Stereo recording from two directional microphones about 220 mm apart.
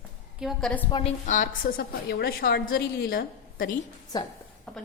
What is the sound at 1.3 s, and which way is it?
A woman's voice, 40° left (ahead or behind).